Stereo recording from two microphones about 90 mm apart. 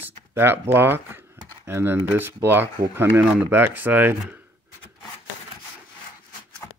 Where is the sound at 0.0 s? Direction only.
25° right (ahead or behind).